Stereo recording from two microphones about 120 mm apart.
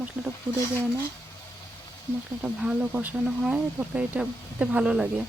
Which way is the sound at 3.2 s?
Centre (ahead or behind).